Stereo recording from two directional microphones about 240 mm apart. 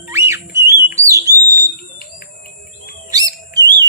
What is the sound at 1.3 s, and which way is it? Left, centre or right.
Bird, left.